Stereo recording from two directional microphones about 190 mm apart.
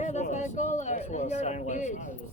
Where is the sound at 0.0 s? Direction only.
40° left (ahead or behind).